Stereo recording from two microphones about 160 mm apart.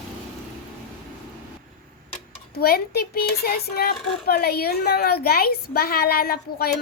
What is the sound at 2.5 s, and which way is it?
Speech, 75° left (ahead or behind).